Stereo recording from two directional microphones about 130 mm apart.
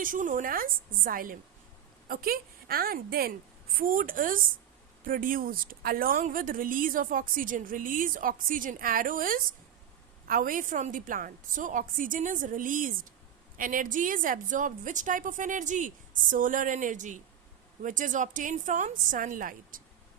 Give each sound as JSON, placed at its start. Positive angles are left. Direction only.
{"t": 0.0, "sound": "a woman's voice", "side_deg": -90}
{"t": 3.8, "sound": "a woman's voice", "side_deg": -90}
{"t": 16.3, "sound": "speech", "side_deg": -90}
{"t": 17.8, "sound": "a woman's voice", "side_deg": -85}